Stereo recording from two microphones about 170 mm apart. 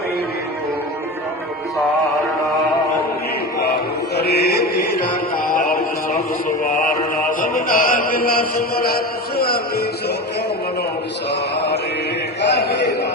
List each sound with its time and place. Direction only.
4.1 s mantra: 70° left (ahead or behind)
5.5 s music: 55° left (ahead or behind)
6.7 s mantra: 50° left (ahead or behind)
11.3 s mantra: 85° left
12.5 s a sound: 80° left